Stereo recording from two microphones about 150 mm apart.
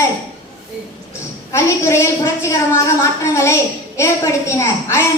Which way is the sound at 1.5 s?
15° left (ahead or behind).